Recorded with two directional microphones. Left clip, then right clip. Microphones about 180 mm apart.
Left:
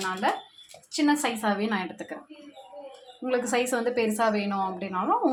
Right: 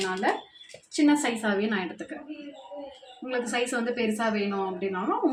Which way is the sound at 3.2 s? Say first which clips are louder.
Left 3 dB; 30° left (ahead or behind).